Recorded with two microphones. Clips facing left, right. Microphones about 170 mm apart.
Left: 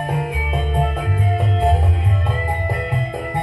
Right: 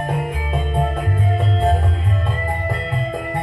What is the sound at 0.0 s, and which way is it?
Music, 10° left (ahead or behind).